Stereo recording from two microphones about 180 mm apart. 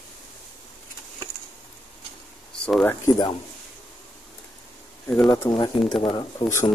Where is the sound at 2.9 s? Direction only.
15° left (ahead or behind).